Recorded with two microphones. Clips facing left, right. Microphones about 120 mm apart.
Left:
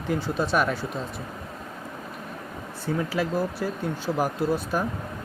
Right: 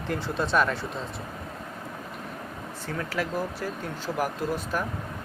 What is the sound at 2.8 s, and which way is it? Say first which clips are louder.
Speech: left 5 dB; 15° left (ahead or behind).